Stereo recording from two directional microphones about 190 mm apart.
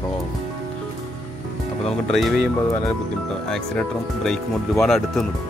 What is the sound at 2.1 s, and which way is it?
Speech, centre (ahead or behind).